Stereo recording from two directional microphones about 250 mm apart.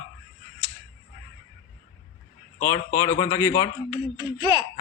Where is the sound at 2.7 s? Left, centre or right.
Centre.